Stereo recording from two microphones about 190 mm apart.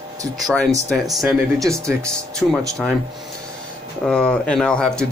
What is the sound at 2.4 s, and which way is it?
Speech, centre (ahead or behind).